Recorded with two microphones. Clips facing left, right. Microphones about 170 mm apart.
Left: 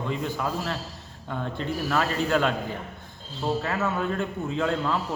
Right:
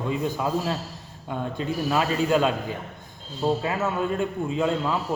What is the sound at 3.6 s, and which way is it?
A man's voice, 15° right (ahead or behind).